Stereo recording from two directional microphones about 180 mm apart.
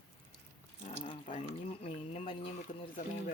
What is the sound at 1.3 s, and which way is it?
Speech, 35° left (ahead or behind).